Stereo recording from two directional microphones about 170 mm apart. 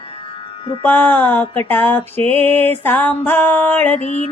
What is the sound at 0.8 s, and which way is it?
Music, 10° left (ahead or behind).